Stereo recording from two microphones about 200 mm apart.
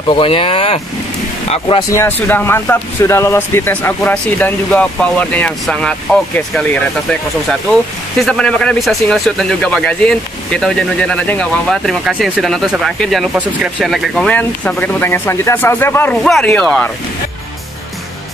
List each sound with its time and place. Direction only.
0.1 s speech: 25° left (ahead or behind)
1.9 s speech: 10° left (ahead or behind)